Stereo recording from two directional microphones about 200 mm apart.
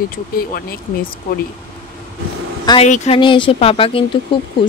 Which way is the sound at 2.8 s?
35° left (ahead or behind).